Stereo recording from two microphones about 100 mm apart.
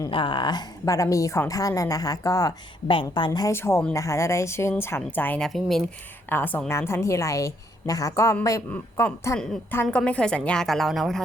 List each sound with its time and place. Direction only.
0.1 s a woman's voice: 55° left (ahead or behind)
0.9 s a woman's voice: 35° left (ahead or behind)
2.8 s a woman's voice: 55° left (ahead or behind)
3.5 s speech: 25° left (ahead or behind)
5.4 s speech: centre (ahead or behind)
6.2 s a woman's voice: 20° left (ahead or behind)
8.7 s a woman's voice: 20° left (ahead or behind); by 11.2 s centre (ahead or behind)